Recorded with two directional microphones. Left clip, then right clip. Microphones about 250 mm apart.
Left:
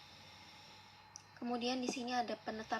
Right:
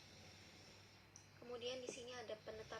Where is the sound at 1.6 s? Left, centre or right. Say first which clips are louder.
Left 7 dB; centre.